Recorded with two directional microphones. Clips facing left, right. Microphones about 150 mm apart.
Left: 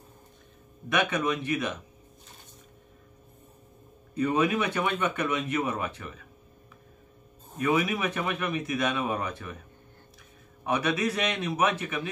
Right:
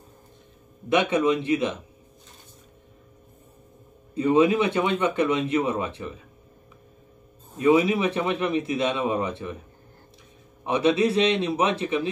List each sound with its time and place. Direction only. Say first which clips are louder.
0.8 s speech: right 6 dB; 25° right (ahead or behind)
4.1 s speech: right 6 dB; 25° right (ahead or behind)
7.5 s speech: right 7 dB; 25° right (ahead or behind)
10.6 s speech: right 6 dB; 25° right (ahead or behind)